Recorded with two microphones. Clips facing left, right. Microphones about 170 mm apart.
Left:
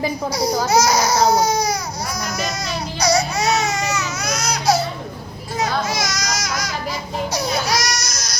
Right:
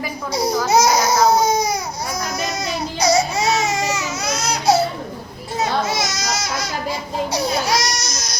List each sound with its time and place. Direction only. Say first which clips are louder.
0.7 s baby cry: right 2 dB; 20° right (ahead or behind)
3.0 s baby cry: right 1 dB; 25° right (ahead or behind)
5.9 s baby cry: right 1 dB; 25° right (ahead or behind)